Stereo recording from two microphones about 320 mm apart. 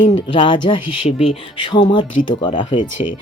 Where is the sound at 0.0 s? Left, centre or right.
Centre.